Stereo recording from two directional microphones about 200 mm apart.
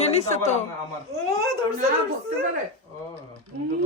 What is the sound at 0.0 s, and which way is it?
Speech, 30° left (ahead or behind).